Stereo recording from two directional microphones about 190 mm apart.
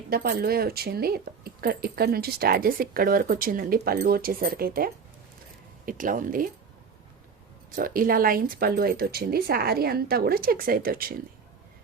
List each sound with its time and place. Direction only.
0.1 s speech: 55° right (ahead or behind)
7.8 s speech: 45° right (ahead or behind)